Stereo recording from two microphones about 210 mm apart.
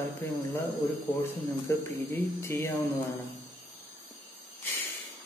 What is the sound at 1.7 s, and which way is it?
A man's voice, 10° left (ahead or behind).